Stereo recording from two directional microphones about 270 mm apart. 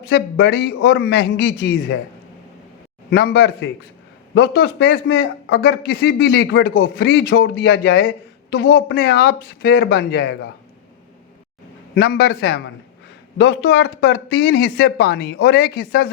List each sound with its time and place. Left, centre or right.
0.0 s a man's voice: left
3.1 s a man's voice: left
11.9 s a man's voice: left